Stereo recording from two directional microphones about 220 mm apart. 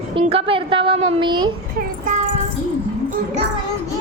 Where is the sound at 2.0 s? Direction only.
35° right (ahead or behind).